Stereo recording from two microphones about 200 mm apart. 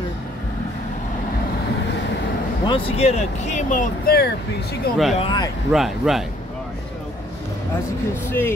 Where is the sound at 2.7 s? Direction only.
30° left (ahead or behind); by 4.3 s 50° left (ahead or behind).